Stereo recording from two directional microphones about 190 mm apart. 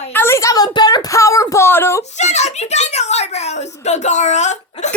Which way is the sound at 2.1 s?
35° left (ahead or behind).